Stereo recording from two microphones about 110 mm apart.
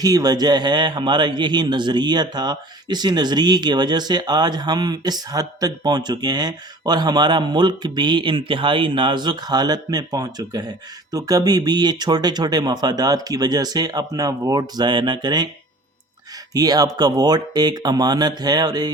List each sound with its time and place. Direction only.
0.0 s a man's voice: 35° right (ahead or behind)
16.6 s a man's voice: 35° right (ahead or behind)